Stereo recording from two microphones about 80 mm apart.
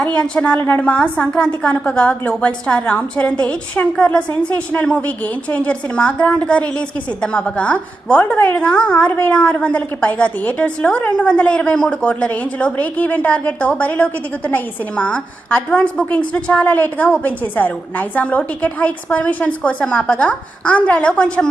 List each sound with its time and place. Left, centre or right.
0.2 s a woman's voice: centre